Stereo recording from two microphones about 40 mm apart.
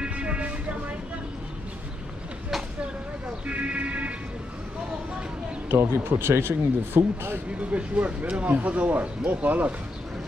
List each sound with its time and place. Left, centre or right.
0.0 s music: right
3.4 s speech: right
5.7 s speech: right
7.7 s speech: right